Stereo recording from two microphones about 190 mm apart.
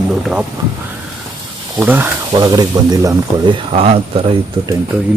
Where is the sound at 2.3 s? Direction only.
20° right (ahead or behind).